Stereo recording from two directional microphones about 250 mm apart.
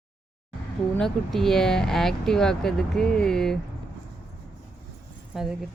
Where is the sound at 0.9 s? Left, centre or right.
Centre.